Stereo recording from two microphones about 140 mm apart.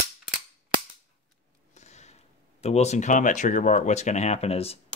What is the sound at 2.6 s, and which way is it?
Speech, 50° left (ahead or behind).